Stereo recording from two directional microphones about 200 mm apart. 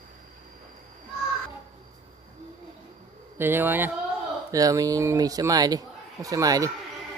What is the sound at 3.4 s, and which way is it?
A man's voice, 10° right (ahead or behind).